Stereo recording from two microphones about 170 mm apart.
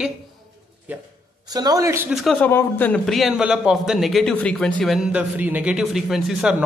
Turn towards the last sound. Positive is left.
turn(degrees=0)  # may be behind; listen again after turning